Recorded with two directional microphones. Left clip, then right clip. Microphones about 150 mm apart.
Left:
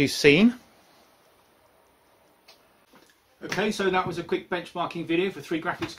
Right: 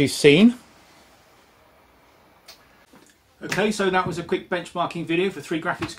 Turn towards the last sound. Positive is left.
turn(degrees=-5)  # may be behind; listen again after turning